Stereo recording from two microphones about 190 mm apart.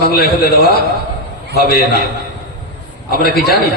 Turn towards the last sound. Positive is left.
turn(degrees=55)  # may be behind; listen again after turning